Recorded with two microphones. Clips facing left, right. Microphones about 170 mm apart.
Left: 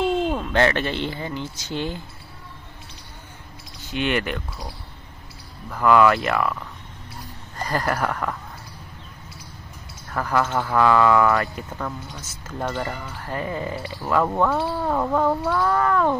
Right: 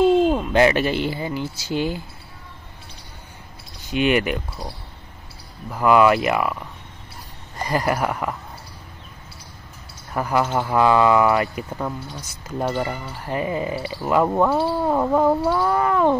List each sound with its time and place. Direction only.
0.3 s speech: 10° right (ahead or behind)
3.9 s speech: 15° right (ahead or behind)
5.7 s speech: 15° right (ahead or behind)
10.1 s speech: 15° right (ahead or behind)